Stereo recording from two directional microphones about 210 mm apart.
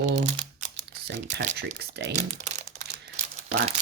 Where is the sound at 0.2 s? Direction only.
35° right (ahead or behind).